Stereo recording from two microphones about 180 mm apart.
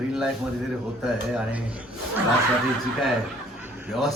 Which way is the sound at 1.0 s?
5° right (ahead or behind).